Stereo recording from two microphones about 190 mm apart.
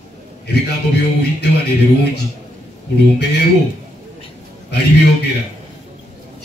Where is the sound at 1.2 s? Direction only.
60° left (ahead or behind).